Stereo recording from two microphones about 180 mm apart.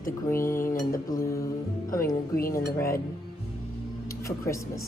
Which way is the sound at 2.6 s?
15° left (ahead or behind).